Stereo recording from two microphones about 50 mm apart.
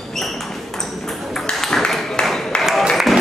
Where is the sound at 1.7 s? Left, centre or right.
Centre.